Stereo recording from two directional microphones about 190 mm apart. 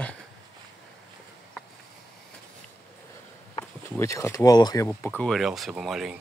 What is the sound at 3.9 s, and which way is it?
Speech, 15° left (ahead or behind).